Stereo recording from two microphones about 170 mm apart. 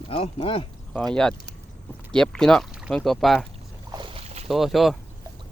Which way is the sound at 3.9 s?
25° right (ahead or behind).